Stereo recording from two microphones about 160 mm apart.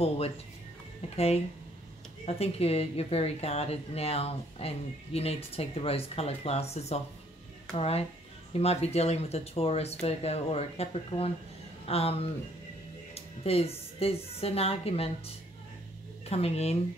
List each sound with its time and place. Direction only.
1.1 s a woman's voice: 40° left (ahead or behind)